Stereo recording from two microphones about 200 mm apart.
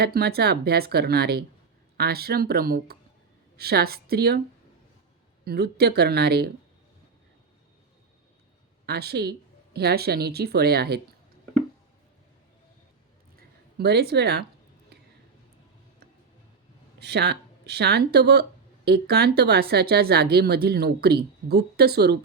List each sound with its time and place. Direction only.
0.0 s a woman's voice: 50° right (ahead or behind)
5.5 s a woman's voice: 55° right (ahead or behind)
8.9 s a woman's voice: 55° right (ahead or behind)
13.7 s a woman's voice: 55° right (ahead or behind)
17.0 s a woman's voice: 55° right (ahead or behind)